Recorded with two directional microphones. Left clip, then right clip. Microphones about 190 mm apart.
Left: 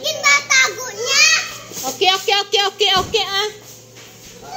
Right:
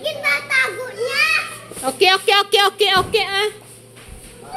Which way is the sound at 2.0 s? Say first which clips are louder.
Right 2 dB; 25° right (ahead or behind).